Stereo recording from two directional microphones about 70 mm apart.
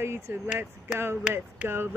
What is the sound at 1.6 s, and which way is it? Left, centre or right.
Speech, right.